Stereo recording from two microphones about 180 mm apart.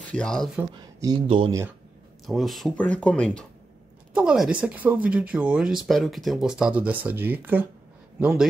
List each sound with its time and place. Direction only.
0.1 s speech: 5° left (ahead or behind)
0.6 s speech: 20° right (ahead or behind)
1.2 s speech: 30° right (ahead or behind)
2.2 s speech: centre (ahead or behind)
4.1 s speech: 5° right (ahead or behind)